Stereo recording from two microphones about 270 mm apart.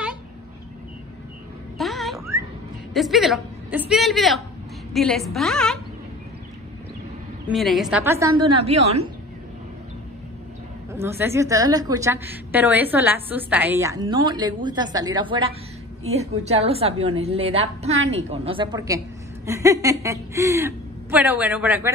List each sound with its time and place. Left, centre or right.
1.8 s a sound: centre
2.9 s a woman's voice: centre
7.4 s a woman's voice: centre
10.9 s a woman's voice: centre